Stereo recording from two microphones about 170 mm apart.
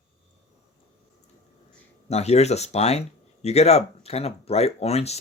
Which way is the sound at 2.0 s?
40° left (ahead or behind).